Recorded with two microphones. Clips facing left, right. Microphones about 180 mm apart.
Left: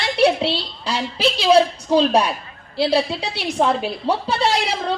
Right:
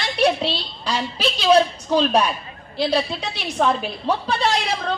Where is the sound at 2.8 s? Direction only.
30° left (ahead or behind).